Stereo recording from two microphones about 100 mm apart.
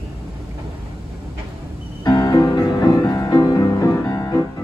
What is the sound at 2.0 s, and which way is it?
Music, 40° left (ahead or behind).